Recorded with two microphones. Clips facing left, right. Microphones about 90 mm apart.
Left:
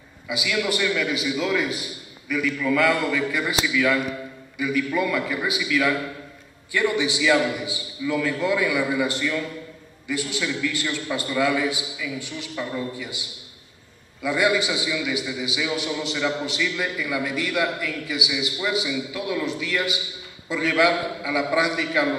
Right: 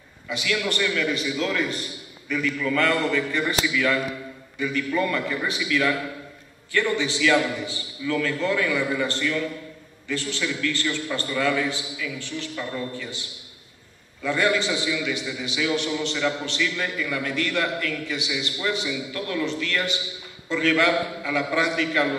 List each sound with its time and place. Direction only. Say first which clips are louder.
0.3 s a man's voice: left 1 dB; 10° left (ahead or behind)